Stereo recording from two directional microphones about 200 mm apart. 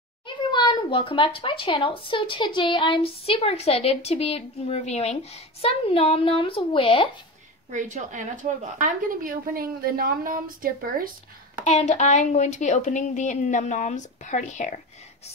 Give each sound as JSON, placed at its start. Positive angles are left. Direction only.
{"t": 0.5, "sound": "a child's voice", "side_deg": 20}
{"t": 7.7, "sound": "a woman's voice", "side_deg": -40}
{"t": 11.6, "sound": "a woman's voice", "side_deg": 35}